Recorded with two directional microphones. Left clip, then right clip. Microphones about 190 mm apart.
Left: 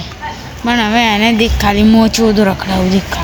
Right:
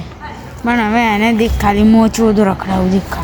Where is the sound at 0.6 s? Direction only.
5° right (ahead or behind).